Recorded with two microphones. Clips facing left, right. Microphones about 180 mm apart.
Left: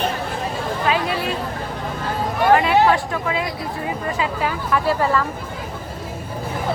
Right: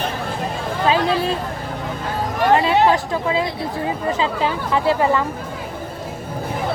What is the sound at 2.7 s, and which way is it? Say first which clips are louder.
Speech: even; 20° right (ahead or behind).